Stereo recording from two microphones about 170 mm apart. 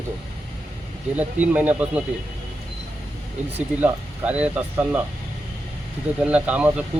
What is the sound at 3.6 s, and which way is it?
Speech, 10° right (ahead or behind).